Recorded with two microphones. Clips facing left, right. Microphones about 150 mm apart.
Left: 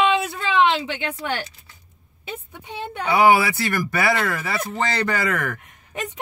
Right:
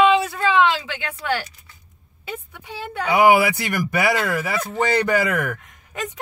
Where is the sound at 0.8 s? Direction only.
25° left (ahead or behind).